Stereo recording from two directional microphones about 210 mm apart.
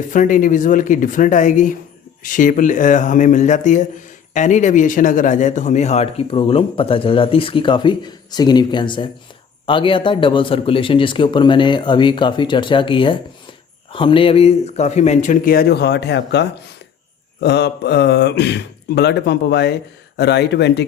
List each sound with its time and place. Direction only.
0.1 s a man's voice: 40° left (ahead or behind); by 20.8 s 55° left (ahead or behind)